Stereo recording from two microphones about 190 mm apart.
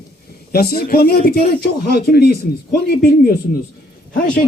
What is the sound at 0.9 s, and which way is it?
Speech, 55° left (ahead or behind).